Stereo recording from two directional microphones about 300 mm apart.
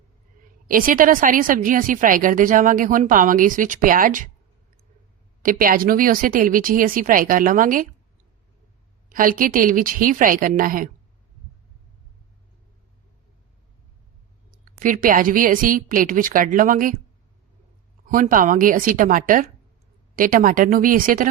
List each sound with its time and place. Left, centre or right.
0.7 s a woman's voice: right
5.4 s a woman's voice: right
9.0 s a woman's voice: right
14.5 s a woman's voice: right
18.1 s a woman's voice: right